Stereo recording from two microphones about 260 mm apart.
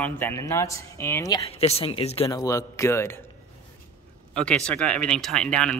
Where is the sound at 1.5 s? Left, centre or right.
Left.